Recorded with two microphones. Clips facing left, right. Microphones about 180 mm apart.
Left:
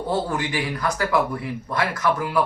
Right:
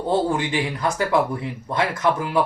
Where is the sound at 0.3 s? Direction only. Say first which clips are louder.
Right 3 dB; 25° right (ahead or behind).